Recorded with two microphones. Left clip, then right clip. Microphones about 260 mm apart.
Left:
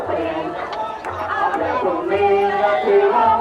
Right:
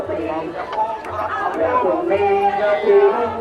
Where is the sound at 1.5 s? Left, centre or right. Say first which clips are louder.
Right 2 dB; centre.